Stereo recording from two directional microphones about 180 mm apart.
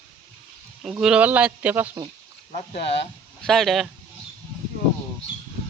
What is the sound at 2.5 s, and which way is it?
Speech, 35° left (ahead or behind).